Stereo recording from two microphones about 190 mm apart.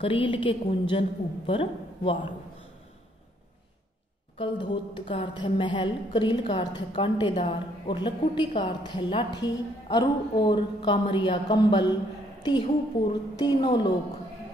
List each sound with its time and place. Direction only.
0.0 s a woman's voice: 25° left (ahead or behind)
4.4 s a woman's voice: 25° left (ahead or behind)